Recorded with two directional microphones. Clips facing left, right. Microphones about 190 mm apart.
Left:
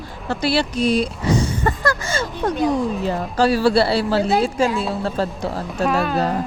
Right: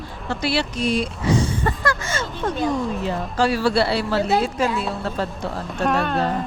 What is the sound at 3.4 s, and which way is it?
A woman's voice, 35° left (ahead or behind).